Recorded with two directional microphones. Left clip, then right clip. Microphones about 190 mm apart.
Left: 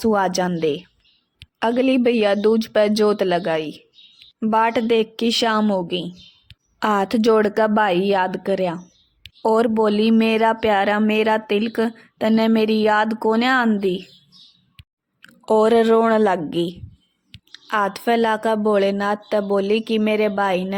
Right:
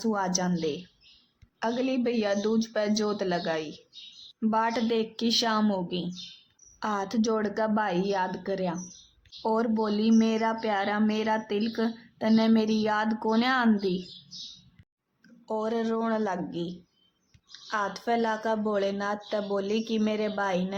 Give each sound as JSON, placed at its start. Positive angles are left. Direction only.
{"t": 0.0, "sound": "speech", "side_deg": 40}
{"t": 6.7, "sound": "speech", "side_deg": 40}
{"t": 15.2, "sound": "speech", "side_deg": 45}